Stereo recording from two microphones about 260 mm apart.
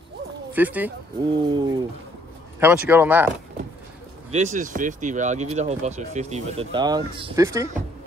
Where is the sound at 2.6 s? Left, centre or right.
Centre.